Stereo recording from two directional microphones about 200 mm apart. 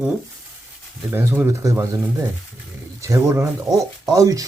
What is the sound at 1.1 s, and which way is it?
Speech, 10° right (ahead or behind).